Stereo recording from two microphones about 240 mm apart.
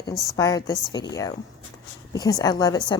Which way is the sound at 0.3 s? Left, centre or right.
Centre.